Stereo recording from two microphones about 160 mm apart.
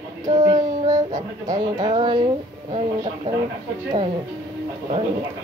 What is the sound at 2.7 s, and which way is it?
Child singing, 35° right (ahead or behind).